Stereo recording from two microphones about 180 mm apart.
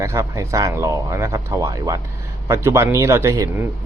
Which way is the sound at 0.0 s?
15° right (ahead or behind).